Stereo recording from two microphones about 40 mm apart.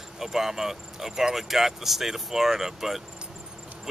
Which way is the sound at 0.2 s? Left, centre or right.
Centre.